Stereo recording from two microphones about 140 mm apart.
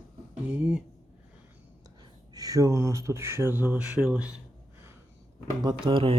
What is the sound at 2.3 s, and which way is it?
Speech, 25° right (ahead or behind).